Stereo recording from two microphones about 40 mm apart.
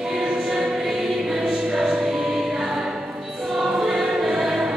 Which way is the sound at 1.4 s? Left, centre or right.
Centre.